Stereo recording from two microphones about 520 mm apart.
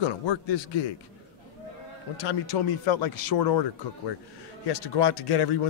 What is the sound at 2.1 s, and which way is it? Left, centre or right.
A man's voice, left.